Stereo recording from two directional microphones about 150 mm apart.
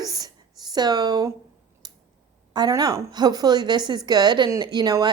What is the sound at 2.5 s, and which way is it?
A woman's voice, 25° right (ahead or behind).